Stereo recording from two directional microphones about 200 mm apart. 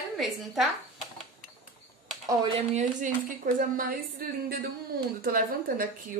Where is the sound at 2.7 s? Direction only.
45° right (ahead or behind).